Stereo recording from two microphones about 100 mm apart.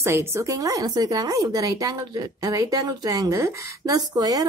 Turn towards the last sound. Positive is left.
turn(degrees=-40)  # may be behind; listen again after turning